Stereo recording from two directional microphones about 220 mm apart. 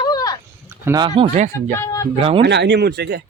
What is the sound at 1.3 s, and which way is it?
Speech, 35° right (ahead or behind).